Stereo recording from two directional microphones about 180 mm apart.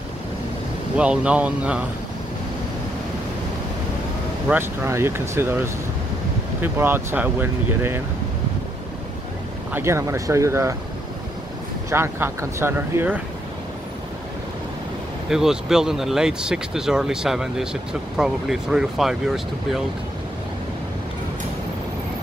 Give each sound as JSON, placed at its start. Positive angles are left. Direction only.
{"t": 0.9, "sound": "speech", "side_deg": -5}
{"t": 4.5, "sound": "speech", "side_deg": -15}
{"t": 6.6, "sound": "speech", "side_deg": -10}
{"t": 9.7, "sound": "speech", "side_deg": -15}
{"t": 11.9, "sound": "speech", "side_deg": -15}
{"t": 15.2, "sound": "speech", "side_deg": -5}